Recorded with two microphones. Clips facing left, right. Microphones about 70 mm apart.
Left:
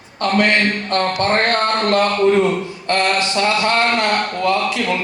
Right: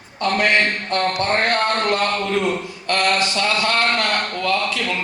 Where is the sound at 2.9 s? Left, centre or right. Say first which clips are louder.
Left 1 dB; left.